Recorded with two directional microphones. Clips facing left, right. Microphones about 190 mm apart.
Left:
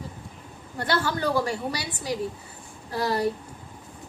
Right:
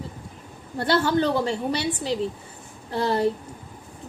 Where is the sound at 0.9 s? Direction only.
25° right (ahead or behind).